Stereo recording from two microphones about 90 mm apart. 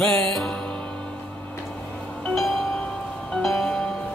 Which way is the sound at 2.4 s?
Centre (ahead or behind).